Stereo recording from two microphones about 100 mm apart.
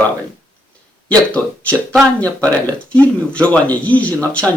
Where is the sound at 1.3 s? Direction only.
15° left (ahead or behind).